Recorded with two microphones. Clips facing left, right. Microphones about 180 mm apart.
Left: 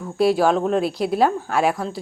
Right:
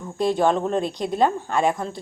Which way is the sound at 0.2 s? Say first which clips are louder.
Left 3 dB; 5° left (ahead or behind).